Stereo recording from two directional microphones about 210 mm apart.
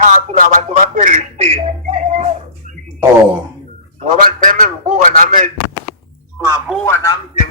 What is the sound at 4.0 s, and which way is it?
A man's voice, 35° right (ahead or behind).